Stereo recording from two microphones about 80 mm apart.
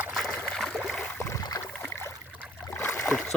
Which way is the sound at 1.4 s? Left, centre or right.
Left.